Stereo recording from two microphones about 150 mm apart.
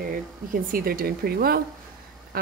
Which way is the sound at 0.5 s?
70° right (ahead or behind).